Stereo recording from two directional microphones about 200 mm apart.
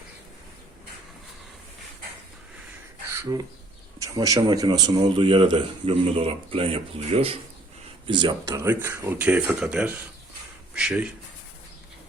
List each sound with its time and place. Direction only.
3.1 s beatboxing: 15° right (ahead or behind)
4.0 s a man's voice: 15° right (ahead or behind)